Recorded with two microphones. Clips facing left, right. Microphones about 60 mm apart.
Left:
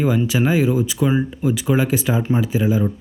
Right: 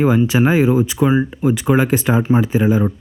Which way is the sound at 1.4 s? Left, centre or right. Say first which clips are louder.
Right 4 dB; right.